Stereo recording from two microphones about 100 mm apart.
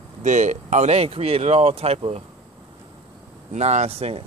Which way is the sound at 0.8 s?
90° right.